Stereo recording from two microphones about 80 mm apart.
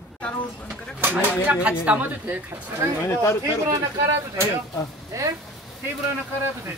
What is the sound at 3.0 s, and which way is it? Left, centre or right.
Speech, left.